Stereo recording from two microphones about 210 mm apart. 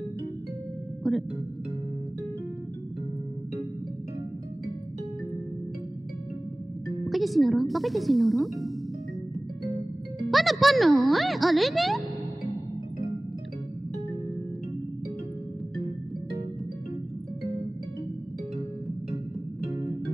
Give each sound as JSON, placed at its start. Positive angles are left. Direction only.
{"t": 1.0, "sound": "music", "side_deg": 0}
{"t": 7.1, "sound": "speech", "side_deg": 0}
{"t": 10.3, "sound": "speech", "side_deg": 0}